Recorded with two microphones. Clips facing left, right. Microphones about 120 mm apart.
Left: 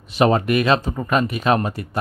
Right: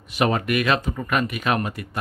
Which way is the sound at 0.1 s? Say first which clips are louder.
Left 5 dB; 30° left (ahead or behind).